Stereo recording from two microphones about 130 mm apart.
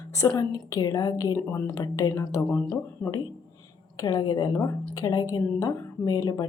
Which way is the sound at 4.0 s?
30° left (ahead or behind).